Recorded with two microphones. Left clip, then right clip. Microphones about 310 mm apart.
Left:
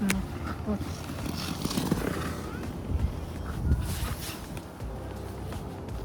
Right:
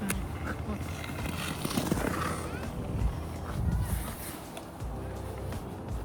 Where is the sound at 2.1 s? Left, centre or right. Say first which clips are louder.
Right 2 dB; centre.